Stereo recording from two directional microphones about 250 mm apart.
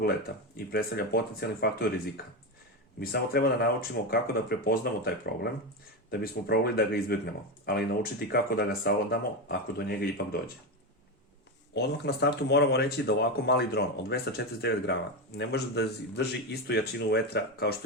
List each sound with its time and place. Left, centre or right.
0.5 s speech: left
11.7 s speech: left